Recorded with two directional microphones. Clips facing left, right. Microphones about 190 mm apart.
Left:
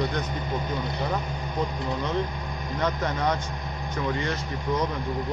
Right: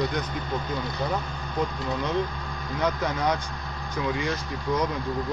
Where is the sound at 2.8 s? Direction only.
5° right (ahead or behind).